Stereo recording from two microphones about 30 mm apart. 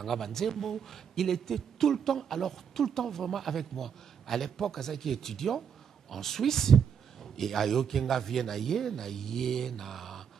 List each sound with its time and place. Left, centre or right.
0.0 s a man's voice: centre